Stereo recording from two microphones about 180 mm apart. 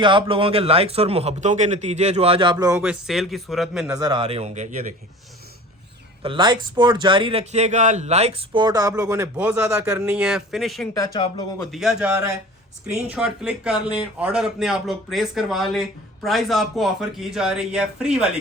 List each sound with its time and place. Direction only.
0.0 s a man's voice: 25° right (ahead or behind)
2.7 s a man's voice: 5° right (ahead or behind)
3.9 s a man's voice: 20° right (ahead or behind); by 4.9 s 45° right (ahead or behind)
6.2 s a man's voice: 25° right (ahead or behind); by 10.8 s centre (ahead or behind)
10.9 s speech: 25° left (ahead or behind)
11.6 s a man's voice: centre (ahead or behind)